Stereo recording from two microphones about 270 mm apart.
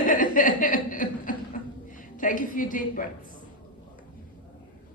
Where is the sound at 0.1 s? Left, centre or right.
Left.